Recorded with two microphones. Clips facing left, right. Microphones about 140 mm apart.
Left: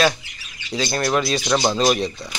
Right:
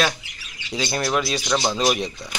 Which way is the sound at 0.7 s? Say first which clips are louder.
Left 2 dB; 15° right (ahead or behind).